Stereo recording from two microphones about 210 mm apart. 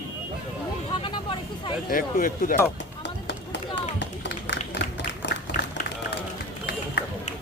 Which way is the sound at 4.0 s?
55° left (ahead or behind).